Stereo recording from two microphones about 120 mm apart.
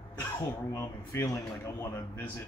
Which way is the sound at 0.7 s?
20° left (ahead or behind).